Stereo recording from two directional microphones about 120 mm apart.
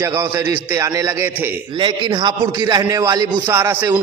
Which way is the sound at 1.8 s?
35° right (ahead or behind).